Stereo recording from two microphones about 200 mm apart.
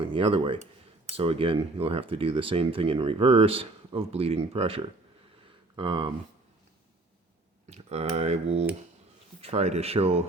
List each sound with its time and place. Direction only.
0.0 s speech: 25° right (ahead or behind)
7.7 s speech: 30° right (ahead or behind)